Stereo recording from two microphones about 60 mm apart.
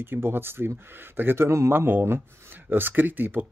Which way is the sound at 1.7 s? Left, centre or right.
Right.